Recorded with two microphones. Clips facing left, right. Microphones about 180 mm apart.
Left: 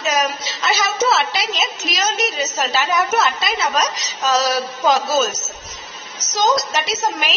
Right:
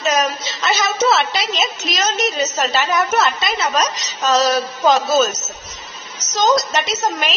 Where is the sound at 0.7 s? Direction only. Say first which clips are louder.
Right 2 dB; centre (ahead or behind).